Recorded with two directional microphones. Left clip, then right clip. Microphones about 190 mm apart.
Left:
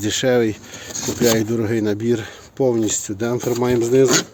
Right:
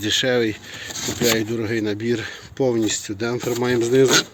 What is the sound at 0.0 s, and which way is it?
Speech, 25° left (ahead or behind).